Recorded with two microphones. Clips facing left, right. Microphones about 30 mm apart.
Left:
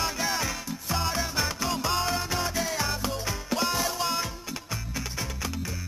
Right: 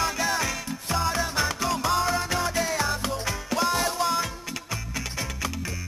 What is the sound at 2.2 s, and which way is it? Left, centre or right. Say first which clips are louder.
Music: right 3 dB; centre.